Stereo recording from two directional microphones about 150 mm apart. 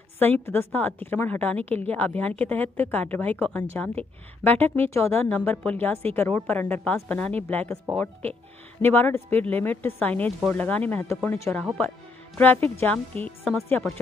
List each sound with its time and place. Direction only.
0.2 s a woman's voice: 15° left (ahead or behind)
8.8 s a woman's voice: 15° left (ahead or behind)
12.7 s a woman's voice: 10° left (ahead or behind)